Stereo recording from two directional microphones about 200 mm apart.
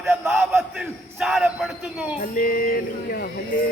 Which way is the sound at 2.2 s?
45° left (ahead or behind).